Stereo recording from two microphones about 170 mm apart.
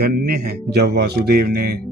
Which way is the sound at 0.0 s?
65° right (ahead or behind).